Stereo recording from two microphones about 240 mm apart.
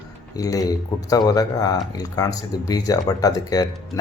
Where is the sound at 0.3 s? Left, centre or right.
Centre.